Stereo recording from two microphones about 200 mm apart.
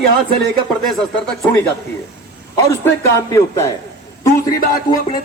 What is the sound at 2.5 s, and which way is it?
A man's voice, 15° left (ahead or behind).